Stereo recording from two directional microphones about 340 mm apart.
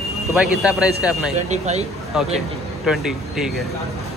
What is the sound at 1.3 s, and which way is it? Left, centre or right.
Speech, centre.